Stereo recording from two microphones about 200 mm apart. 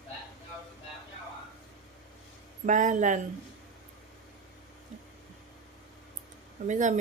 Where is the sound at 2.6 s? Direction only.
40° right (ahead or behind).